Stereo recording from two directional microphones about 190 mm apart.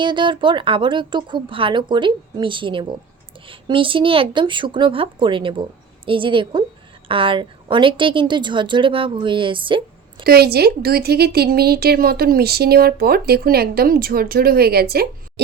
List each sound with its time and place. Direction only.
0.0 s a woman's voice: 25° right (ahead or behind)
10.2 s speech: 55° right (ahead or behind)